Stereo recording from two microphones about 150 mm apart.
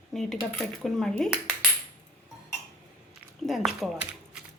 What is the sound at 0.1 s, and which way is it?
Speech, centre (ahead or behind).